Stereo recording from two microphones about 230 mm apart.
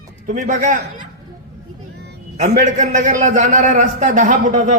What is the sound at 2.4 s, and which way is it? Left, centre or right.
A man's voice, right.